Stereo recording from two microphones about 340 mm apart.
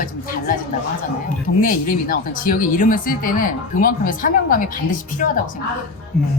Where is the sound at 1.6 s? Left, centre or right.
Left.